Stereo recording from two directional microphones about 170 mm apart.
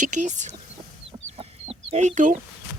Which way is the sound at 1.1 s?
35° right (ahead or behind).